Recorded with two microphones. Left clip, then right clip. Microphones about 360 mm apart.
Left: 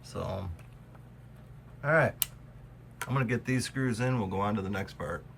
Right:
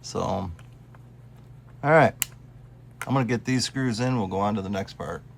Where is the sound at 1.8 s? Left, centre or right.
Centre.